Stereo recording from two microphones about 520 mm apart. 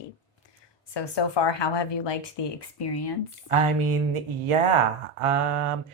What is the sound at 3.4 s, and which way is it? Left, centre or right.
Speech, right.